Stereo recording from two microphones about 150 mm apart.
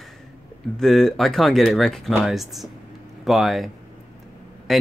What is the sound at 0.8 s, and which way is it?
Speech, centre (ahead or behind).